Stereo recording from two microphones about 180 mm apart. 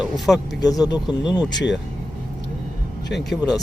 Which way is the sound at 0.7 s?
20° left (ahead or behind).